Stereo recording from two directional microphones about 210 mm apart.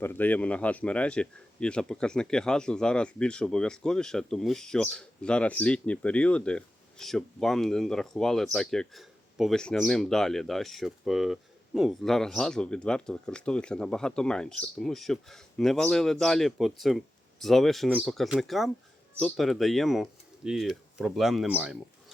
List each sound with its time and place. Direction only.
0.0 s speech: 10° left (ahead or behind)